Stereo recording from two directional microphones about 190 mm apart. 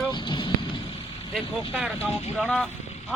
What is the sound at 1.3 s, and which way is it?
Speech, centre (ahead or behind).